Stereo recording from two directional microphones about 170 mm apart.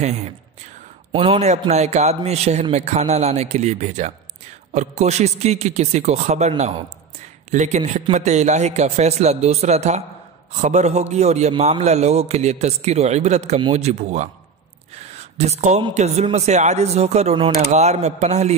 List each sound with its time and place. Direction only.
1.1 s speech: 35° right (ahead or behind)